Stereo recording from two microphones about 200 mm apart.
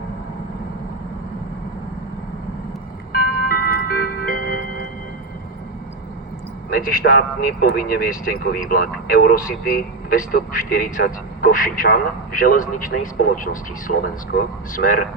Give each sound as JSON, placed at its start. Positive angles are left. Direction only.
{"t": 3.1, "sound": "music", "side_deg": 50}
{"t": 6.7, "sound": "speech", "side_deg": 45}